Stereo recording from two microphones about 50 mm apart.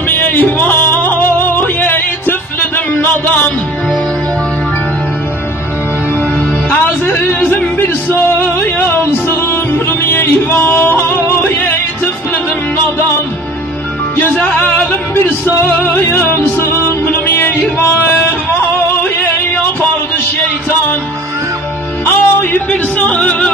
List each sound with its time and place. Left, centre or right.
0.1 s music: left
7.4 s music: left
8.1 s music: left
14.1 s music: left
19.1 s a sound: left
22.0 s music: left
22.7 s yodeling: left